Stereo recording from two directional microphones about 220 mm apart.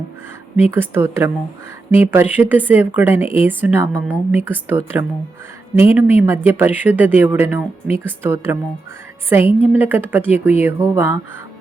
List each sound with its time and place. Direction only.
0.7 s speech: 10° right (ahead or behind)
9.4 s a woman's voice: 25° left (ahead or behind)
9.7 s speech: 10° right (ahead or behind)